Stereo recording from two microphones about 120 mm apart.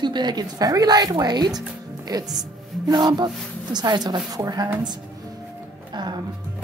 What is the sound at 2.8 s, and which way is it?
A woman's voice, 35° right (ahead or behind).